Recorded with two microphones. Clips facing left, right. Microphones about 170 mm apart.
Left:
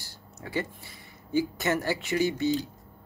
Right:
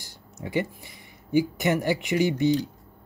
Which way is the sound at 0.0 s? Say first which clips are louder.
Right 5 dB; 15° right (ahead or behind).